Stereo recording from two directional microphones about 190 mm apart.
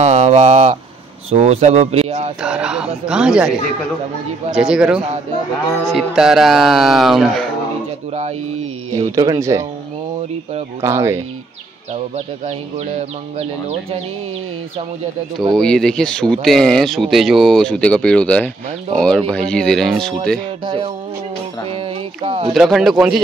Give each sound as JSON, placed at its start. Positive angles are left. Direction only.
{"t": 0.0, "sound": "speech", "side_deg": -35}
{"t": 2.4, "sound": "speech", "side_deg": -5}
{"t": 4.6, "sound": "speech", "side_deg": -5}
{"t": 8.1, "sound": "speech", "side_deg": -35}
{"t": 9.1, "sound": "speech", "side_deg": -20}
{"t": 10.8, "sound": "speech", "side_deg": -15}
{"t": 13.4, "sound": "speech", "side_deg": -35}
{"t": 15.5, "sound": "speech", "side_deg": 5}
{"t": 20.6, "sound": "music", "side_deg": -25}
{"t": 21.6, "sound": "a sound", "side_deg": -30}
{"t": 22.5, "sound": "speech", "side_deg": 0}